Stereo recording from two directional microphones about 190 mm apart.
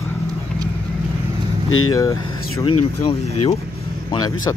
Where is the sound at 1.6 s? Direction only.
90° left.